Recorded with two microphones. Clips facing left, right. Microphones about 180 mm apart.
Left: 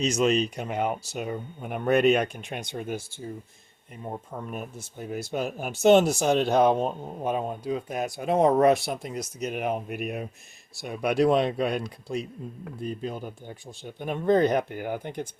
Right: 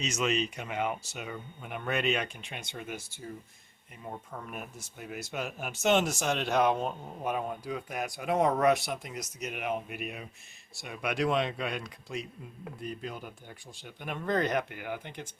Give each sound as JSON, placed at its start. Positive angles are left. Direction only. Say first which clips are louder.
{"t": 0.0, "sound": "speech", "louder": "left 7 dB", "side_deg": 40}
{"t": 4.0, "sound": "speech", "louder": "left 6 dB", "side_deg": 30}